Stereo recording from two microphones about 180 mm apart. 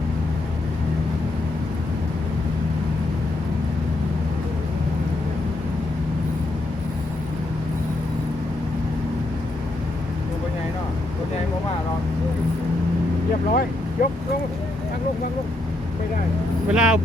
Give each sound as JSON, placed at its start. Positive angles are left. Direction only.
{"t": 13.5, "sound": "vehicle", "side_deg": 50}
{"t": 16.6, "sound": "vehicle", "side_deg": -5}